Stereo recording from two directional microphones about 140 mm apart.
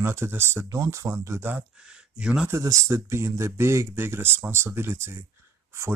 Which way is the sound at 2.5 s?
20° right (ahead or behind).